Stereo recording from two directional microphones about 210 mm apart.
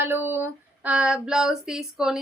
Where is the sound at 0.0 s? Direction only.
10° right (ahead or behind).